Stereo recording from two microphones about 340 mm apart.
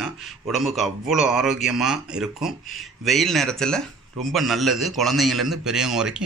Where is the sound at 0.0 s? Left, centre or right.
Centre.